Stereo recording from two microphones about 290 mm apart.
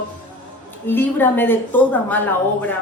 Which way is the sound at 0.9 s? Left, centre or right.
Centre.